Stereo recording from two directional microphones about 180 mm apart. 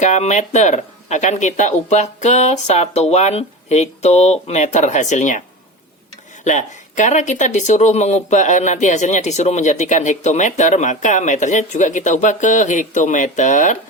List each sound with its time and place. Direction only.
0.0 s speech: 40° left (ahead or behind)
6.4 s speech: 40° left (ahead or behind)